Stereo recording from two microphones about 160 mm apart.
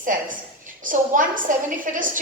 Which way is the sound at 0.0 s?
55° right (ahead or behind).